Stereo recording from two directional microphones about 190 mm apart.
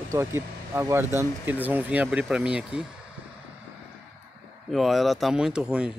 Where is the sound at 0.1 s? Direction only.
15° right (ahead or behind).